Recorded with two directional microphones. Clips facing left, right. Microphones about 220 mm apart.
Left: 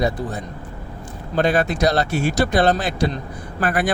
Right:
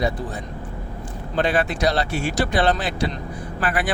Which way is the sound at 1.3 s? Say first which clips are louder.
Left 3 dB; 45° left (ahead or behind).